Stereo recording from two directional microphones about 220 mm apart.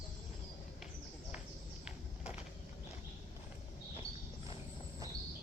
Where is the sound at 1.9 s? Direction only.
5° right (ahead or behind).